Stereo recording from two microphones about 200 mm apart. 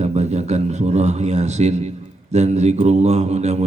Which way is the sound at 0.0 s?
35° right (ahead or behind).